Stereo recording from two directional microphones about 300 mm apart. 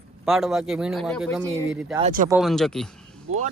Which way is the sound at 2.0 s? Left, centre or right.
Right.